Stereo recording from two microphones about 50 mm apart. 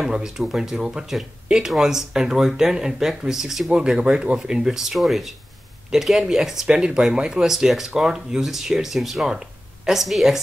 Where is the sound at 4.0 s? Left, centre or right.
Centre.